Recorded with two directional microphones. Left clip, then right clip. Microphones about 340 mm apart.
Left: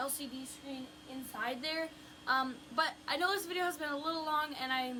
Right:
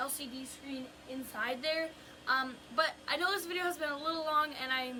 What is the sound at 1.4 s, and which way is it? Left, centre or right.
A woman's voice, centre.